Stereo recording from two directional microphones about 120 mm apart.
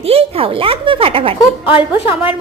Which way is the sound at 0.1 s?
55° right (ahead or behind).